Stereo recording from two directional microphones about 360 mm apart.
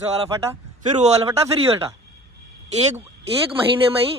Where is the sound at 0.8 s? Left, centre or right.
Centre.